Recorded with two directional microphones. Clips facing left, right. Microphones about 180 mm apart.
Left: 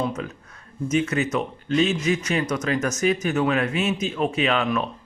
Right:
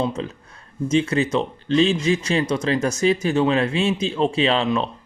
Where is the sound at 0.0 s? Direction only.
30° right (ahead or behind).